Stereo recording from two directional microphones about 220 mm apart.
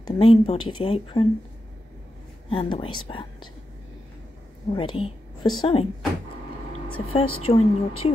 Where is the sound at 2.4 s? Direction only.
25° left (ahead or behind).